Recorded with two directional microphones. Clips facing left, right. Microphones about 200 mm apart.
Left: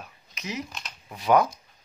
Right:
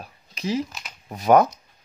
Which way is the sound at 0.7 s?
5° right (ahead or behind).